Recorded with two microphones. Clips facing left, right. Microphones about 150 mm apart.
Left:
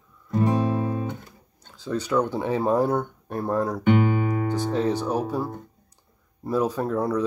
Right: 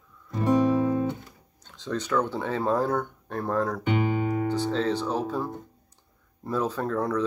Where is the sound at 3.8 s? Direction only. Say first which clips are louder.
Left 4 dB; 55° left (ahead or behind).